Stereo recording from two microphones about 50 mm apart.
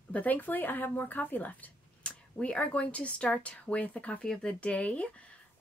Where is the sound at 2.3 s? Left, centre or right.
Left.